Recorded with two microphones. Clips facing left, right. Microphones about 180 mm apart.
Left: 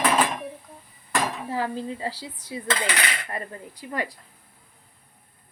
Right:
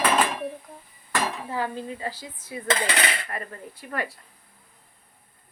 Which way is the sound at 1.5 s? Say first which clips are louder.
Left 3 dB; 30° left (ahead or behind).